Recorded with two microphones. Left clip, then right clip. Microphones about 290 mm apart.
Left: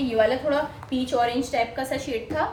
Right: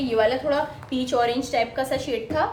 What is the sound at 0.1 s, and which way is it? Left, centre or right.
A woman's voice, centre.